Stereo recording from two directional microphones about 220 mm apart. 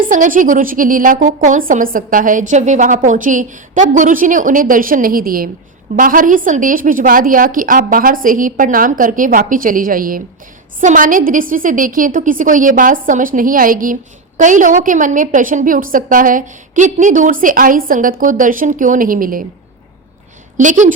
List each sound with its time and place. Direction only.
0.0 s a woman's voice: 40° right (ahead or behind)
20.6 s a woman's voice: 35° right (ahead or behind)